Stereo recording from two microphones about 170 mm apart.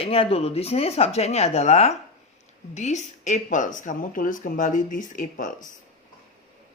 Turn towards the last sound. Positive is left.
turn(degrees=50)  # may be behind; listen again after turning